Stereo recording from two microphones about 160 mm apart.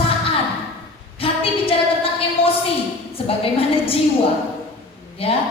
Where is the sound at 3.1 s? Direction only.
35° left (ahead or behind).